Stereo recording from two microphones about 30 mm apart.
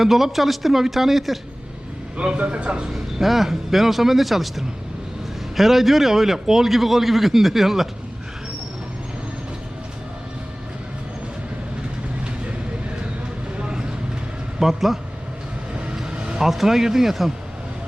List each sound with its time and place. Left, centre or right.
0.0 s a man's voice: centre
2.1 s a man's voice: right
2.9 s a man's voice: centre
13.6 s vehicle: right
14.6 s a man's voice: centre
16.4 s a man's voice: centre